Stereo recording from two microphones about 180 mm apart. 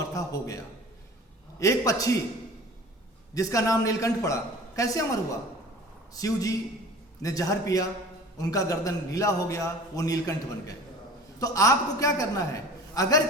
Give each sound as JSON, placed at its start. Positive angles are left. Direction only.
{"t": 0.1, "sound": "a man's voice", "side_deg": 20}
{"t": 3.3, "sound": "a man's voice", "side_deg": 20}